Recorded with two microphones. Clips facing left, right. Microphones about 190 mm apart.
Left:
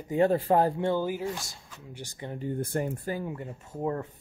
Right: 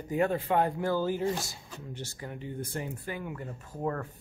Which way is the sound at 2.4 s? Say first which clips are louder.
Left 7 dB; 50° left (ahead or behind).